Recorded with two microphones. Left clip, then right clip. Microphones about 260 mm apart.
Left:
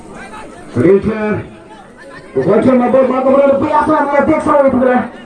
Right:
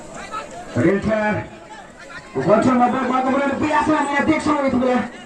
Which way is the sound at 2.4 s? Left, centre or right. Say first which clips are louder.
Left 4 dB; right.